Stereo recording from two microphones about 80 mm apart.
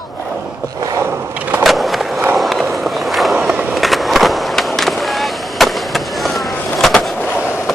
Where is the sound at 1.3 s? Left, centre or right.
Centre.